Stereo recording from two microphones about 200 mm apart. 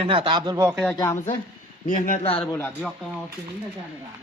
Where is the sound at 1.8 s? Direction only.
40° left (ahead or behind).